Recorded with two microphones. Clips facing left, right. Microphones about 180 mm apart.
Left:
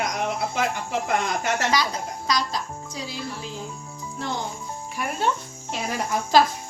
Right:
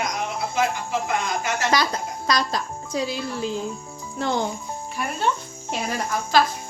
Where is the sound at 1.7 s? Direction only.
55° right (ahead or behind).